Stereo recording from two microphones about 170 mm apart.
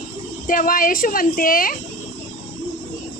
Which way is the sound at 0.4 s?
55° left (ahead or behind).